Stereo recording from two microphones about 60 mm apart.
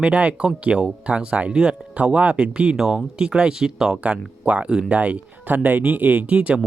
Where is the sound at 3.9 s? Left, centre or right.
Right.